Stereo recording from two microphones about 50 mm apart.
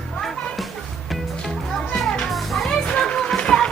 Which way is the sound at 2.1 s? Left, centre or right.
Centre.